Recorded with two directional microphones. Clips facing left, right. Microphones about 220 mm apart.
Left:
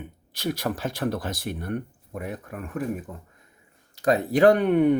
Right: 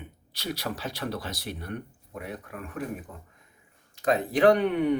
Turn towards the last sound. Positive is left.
turn(degrees=50)  # may be behind; listen again after turning